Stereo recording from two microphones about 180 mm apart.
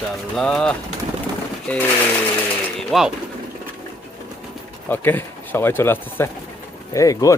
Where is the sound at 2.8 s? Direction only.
Centre (ahead or behind).